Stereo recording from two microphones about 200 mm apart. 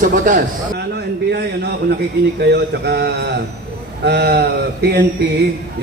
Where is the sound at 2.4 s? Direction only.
55° right (ahead or behind).